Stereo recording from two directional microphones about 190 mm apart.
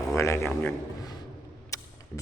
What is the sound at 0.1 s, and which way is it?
A man's voice, 15° left (ahead or behind).